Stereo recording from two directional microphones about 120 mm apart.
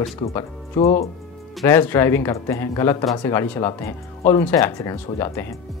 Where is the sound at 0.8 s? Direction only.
60° left (ahead or behind).